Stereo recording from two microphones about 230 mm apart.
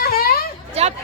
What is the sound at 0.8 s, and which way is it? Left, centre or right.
Chatter, right.